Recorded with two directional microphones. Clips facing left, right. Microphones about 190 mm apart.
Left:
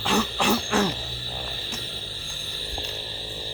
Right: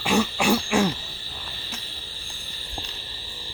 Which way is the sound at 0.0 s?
10° right (ahead or behind).